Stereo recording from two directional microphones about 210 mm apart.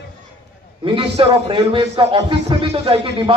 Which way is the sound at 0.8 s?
25° right (ahead or behind).